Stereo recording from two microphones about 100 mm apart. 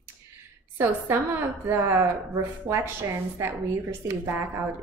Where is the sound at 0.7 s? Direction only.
25° right (ahead or behind).